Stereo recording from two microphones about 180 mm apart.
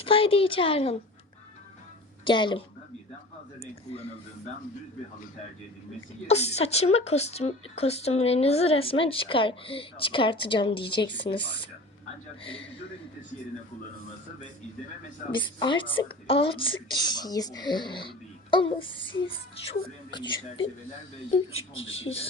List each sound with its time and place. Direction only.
0.0 s speech: 30° left (ahead or behind)
2.2 s speech: 25° left (ahead or behind)
6.2 s speech: 35° left (ahead or behind)
15.4 s speech: 25° left (ahead or behind)
21.8 s speech: 90° left